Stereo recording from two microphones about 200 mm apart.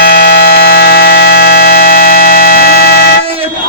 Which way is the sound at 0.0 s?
45° left (ahead or behind).